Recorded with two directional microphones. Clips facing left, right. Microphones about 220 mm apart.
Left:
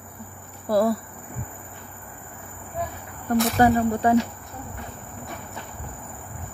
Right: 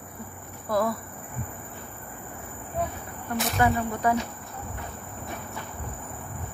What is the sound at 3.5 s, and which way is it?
Speech, 35° left (ahead or behind).